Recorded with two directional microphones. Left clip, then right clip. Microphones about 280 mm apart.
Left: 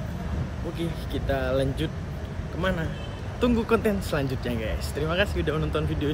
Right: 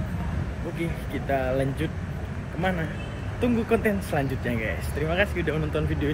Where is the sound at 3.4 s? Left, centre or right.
Centre.